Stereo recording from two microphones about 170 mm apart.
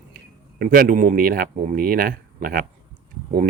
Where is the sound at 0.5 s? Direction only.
65° right (ahead or behind).